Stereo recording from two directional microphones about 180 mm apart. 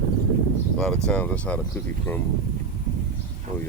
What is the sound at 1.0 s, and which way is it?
Speech, 10° left (ahead or behind).